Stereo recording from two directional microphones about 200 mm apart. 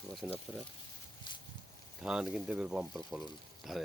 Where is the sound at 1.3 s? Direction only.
25° left (ahead or behind).